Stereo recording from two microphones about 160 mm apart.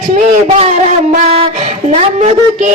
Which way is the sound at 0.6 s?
45° right (ahead or behind).